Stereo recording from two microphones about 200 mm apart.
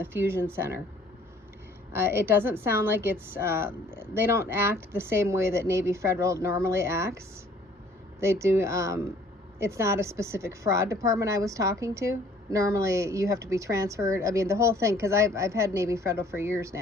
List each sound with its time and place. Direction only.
0.0 s a woman's voice: 10° right (ahead or behind)
1.9 s a woman's voice: 10° right (ahead or behind)
8.2 s a woman's voice: 15° right (ahead or behind)